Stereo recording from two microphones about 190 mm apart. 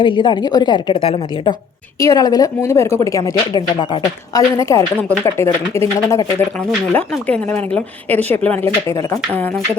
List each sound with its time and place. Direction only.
0.0 s a woman's voice: 25° left (ahead or behind)